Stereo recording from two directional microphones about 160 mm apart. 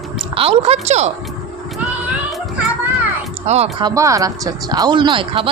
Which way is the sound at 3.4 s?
40° right (ahead or behind).